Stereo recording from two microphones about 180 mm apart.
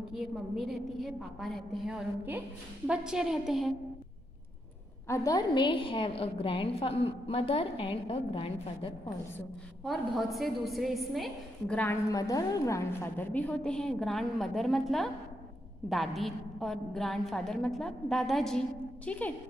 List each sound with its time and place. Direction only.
0.1 s a woman's voice: centre (ahead or behind)
5.0 s a woman's voice: 15° left (ahead or behind)
9.8 s a woman's voice: centre (ahead or behind)